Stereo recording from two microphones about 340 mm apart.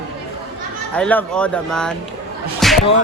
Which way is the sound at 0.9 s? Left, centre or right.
Centre.